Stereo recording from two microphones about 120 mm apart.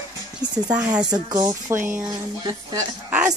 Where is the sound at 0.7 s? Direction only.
10° right (ahead or behind).